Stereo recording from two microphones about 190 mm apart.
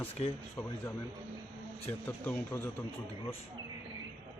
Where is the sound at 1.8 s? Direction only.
10° left (ahead or behind).